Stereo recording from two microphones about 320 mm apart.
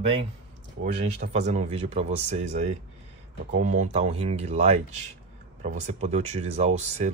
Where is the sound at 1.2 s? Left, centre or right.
Right.